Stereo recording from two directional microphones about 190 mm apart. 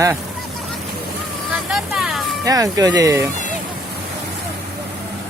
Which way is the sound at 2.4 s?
20° right (ahead or behind).